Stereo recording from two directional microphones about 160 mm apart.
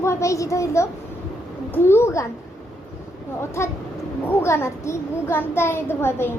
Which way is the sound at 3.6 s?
15° left (ahead or behind).